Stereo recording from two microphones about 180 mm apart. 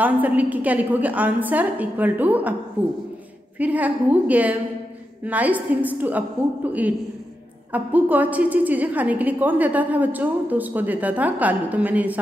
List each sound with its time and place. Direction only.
0.0 s a woman's voice: 10° right (ahead or behind)
3.5 s a woman's voice: 10° right (ahead or behind)